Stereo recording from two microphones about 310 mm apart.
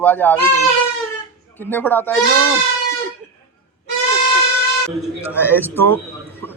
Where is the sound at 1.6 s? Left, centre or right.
Centre.